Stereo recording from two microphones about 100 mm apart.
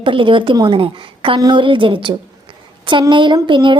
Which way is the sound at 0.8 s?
60° right (ahead or behind).